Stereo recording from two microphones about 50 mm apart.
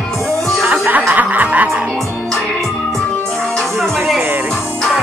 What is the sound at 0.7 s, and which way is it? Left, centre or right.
Music, right.